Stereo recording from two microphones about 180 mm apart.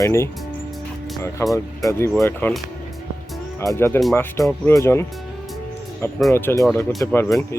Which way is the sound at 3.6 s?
15° left (ahead or behind).